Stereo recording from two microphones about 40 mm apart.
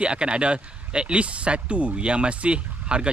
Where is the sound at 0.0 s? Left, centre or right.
Right.